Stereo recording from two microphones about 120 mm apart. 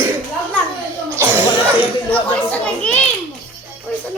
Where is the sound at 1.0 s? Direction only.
20° right (ahead or behind).